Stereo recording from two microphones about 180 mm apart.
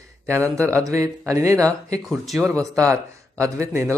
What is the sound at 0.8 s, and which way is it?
Speech, 15° right (ahead or behind).